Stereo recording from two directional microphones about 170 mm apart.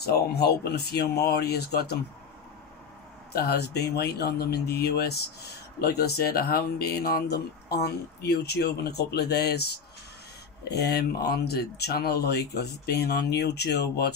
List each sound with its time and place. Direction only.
0.0 s speech: 70° left (ahead or behind)
3.3 s speech: 70° left (ahead or behind)